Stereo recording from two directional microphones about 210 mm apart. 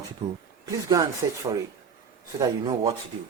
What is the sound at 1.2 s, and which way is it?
Speech, 15° right (ahead or behind).